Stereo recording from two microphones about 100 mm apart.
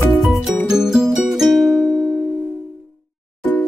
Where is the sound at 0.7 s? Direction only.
5° right (ahead or behind).